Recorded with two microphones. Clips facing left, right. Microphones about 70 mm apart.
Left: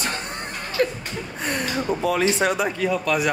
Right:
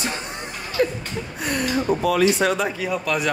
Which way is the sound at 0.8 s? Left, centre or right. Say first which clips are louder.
Right 1 dB; left.